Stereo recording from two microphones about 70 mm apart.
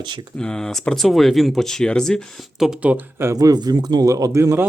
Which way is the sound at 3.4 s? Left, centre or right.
Right.